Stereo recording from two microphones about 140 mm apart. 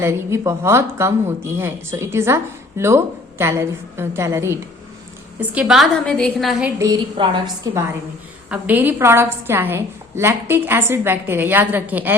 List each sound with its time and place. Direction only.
0.0 s speech: 20° right (ahead or behind)
5.4 s a woman's voice: 5° right (ahead or behind)
6.7 s speech: 25° right (ahead or behind)
8.4 s a woman's voice: 10° right (ahead or behind)